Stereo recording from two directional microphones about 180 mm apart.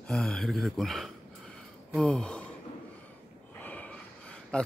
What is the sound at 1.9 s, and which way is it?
Gasp, 5° left (ahead or behind).